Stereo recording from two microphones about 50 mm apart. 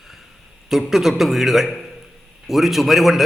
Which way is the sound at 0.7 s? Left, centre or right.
Centre.